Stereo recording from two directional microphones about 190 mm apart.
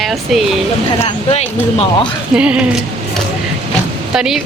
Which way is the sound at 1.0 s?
35° left (ahead or behind).